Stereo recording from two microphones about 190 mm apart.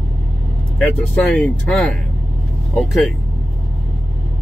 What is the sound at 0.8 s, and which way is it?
Speech, centre (ahead or behind).